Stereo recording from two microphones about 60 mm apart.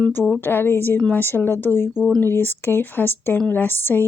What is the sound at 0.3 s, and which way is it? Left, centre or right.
Speech, left.